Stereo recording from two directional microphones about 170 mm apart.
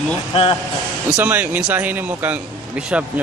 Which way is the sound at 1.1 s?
10° right (ahead or behind).